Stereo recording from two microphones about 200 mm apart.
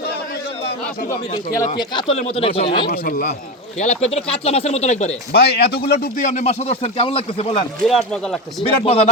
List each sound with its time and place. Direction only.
1.8 s speech: 20° left (ahead or behind)
2.9 s a man's voice: 45° left (ahead or behind)
3.8 s speech: 35° left (ahead or behind)
5.3 s speech: 55° left (ahead or behind); by 7.6 s 30° left (ahead or behind)
7.9 s speech: centre (ahead or behind)
8.6 s speech: 30° left (ahead or behind)